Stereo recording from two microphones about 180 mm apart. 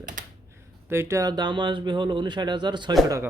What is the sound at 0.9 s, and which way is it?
Speech, 15° right (ahead or behind).